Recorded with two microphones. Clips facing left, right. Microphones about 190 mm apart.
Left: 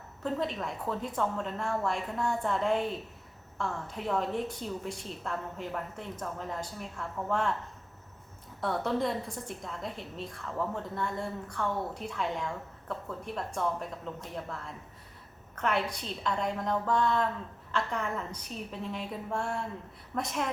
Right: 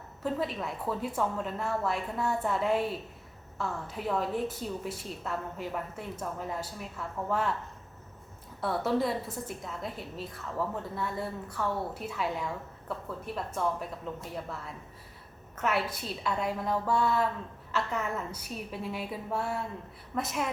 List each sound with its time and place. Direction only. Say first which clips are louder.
0.2 s a woman's voice: even; 5° right (ahead or behind)
8.6 s a woman's voice: right 1 dB; 5° right (ahead or behind)